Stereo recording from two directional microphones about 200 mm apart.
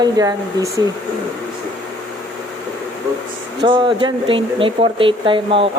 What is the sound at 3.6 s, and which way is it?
Speech, 25° right (ahead or behind).